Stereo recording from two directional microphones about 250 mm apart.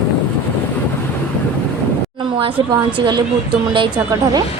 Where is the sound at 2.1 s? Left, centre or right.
Centre.